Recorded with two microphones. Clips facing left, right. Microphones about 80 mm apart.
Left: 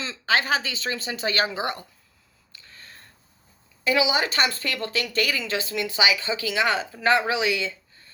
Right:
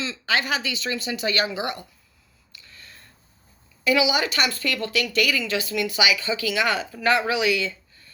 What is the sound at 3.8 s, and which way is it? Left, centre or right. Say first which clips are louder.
A woman's voice: right 1 dB; left.